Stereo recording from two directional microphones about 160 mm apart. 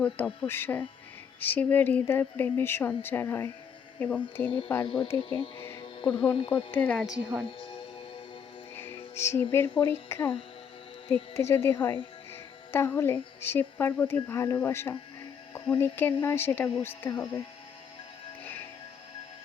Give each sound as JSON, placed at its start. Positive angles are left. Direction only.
{"t": 0.4, "sound": "speech", "side_deg": 15}
{"t": 5.0, "sound": "speech", "side_deg": 35}
{"t": 5.5, "sound": "music", "side_deg": 15}
{"t": 6.1, "sound": "a woman's voice", "side_deg": 5}
{"t": 6.3, "sound": "speech", "side_deg": 30}
{"t": 6.7, "sound": "a woman's voice", "side_deg": 10}
{"t": 7.4, "sound": "speech", "side_deg": 30}
{"t": 8.7, "sound": "music", "side_deg": 15}
{"t": 9.8, "sound": "speech", "side_deg": 15}
{"t": 12.3, "sound": "music", "side_deg": 15}
{"t": 13.4, "sound": "speech", "side_deg": 15}